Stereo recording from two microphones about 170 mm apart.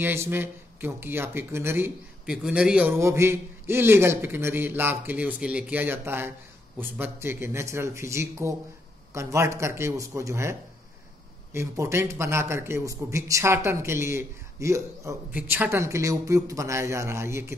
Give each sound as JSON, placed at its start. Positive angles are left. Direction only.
{"t": 0.0, "sound": "speech", "side_deg": -15}
{"t": 11.5, "sound": "speech", "side_deg": -15}